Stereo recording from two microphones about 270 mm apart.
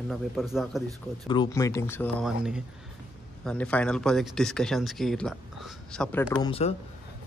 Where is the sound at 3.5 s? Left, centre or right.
Centre.